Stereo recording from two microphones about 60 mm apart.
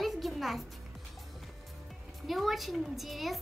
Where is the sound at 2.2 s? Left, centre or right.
Centre.